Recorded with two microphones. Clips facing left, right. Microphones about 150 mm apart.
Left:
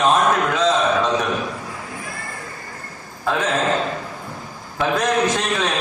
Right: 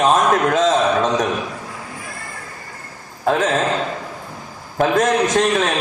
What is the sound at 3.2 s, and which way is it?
Speech, 45° right (ahead or behind).